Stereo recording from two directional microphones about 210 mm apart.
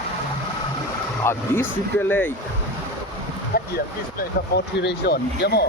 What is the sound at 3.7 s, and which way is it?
Speech, 50° left (ahead or behind).